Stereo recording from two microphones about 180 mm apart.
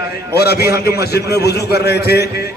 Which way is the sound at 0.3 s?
65° left (ahead or behind).